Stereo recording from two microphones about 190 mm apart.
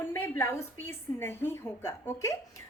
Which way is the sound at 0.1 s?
15° left (ahead or behind).